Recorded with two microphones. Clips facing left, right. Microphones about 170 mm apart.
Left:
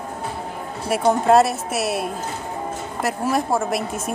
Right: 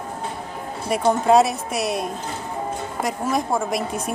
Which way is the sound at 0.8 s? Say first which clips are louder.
Left 1 dB; centre (ahead or behind).